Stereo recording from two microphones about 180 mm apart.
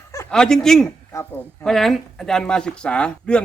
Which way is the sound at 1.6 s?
Centre (ahead or behind).